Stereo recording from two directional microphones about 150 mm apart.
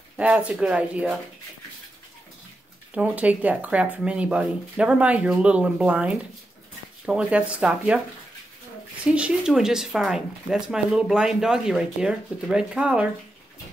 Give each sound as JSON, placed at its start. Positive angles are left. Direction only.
{"t": 0.2, "sound": "speech", "side_deg": -10}
{"t": 2.9, "sound": "speech", "side_deg": -10}
{"t": 9.0, "sound": "speech", "side_deg": -5}